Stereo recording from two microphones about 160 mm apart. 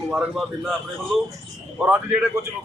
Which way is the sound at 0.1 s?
5° right (ahead or behind).